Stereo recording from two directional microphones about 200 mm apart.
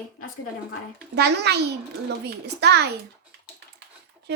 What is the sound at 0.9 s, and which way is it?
A woman's voice, 55° right (ahead or behind).